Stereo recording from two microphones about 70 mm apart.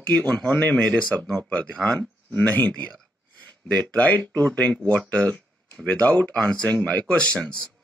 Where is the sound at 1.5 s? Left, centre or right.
Centre.